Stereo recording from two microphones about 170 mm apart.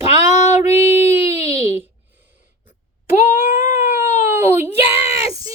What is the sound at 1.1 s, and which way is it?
Speech, 15° right (ahead or behind).